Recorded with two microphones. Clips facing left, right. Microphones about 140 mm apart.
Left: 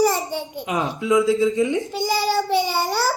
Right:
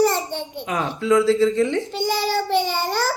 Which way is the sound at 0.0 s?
5° left (ahead or behind).